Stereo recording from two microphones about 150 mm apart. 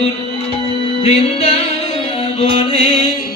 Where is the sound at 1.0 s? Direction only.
40° left (ahead or behind).